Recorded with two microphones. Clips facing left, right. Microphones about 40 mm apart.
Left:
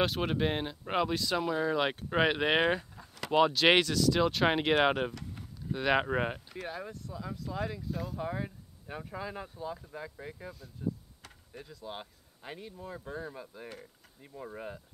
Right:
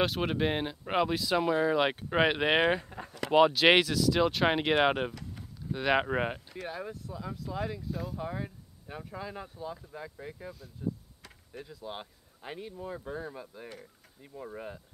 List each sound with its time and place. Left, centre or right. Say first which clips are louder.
0.0 s speech: right 1 dB; centre
3.1 s a sound: right 3 dB; right
3.3 s speech: right 2 dB; centre